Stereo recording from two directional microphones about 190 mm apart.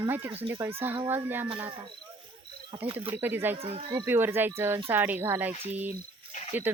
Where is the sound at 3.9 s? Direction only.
15° right (ahead or behind).